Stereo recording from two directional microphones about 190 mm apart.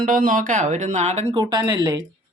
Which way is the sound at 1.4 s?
20° right (ahead or behind).